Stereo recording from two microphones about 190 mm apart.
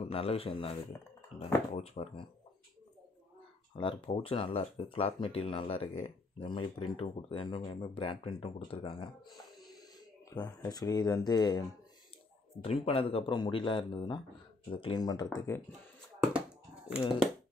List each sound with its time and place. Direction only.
0.1 s speech: 30° left (ahead or behind)
3.7 s speech: 25° left (ahead or behind)
10.6 s speech: 20° left (ahead or behind)
12.6 s speech: 30° left (ahead or behind)
16.3 s a sound: 5° right (ahead or behind)